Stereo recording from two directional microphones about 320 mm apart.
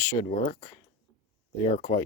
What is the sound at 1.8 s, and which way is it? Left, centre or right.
Speech, left.